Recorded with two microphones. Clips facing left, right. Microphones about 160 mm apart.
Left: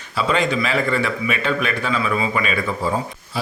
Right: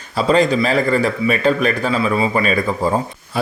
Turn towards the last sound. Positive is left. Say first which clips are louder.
# right 6 dB
turn(degrees=-55)  # may be behind; listen again after turning